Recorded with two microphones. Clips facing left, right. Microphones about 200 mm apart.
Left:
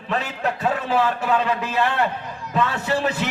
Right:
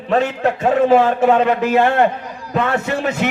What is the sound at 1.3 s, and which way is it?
Speech, 60° right (ahead or behind).